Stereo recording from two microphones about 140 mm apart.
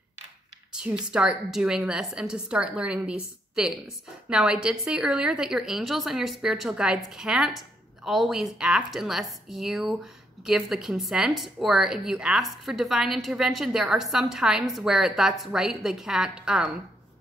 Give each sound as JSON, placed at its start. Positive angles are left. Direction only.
{"t": 0.7, "sound": "a woman's voice", "side_deg": -5}